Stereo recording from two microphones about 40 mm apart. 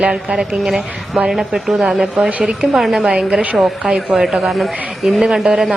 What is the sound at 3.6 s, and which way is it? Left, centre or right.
A woman's voice, centre.